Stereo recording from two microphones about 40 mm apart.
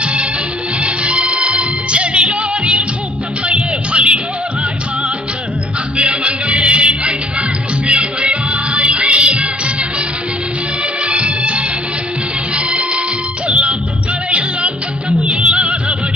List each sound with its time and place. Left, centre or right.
0.0 s music: right
6.0 s music: right
11.0 s music: right